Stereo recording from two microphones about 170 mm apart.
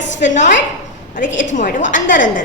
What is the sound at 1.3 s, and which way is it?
Speech, 90° left.